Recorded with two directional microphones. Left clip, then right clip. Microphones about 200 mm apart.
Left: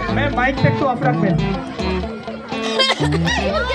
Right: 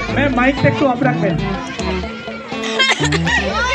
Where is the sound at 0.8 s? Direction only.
45° right (ahead or behind).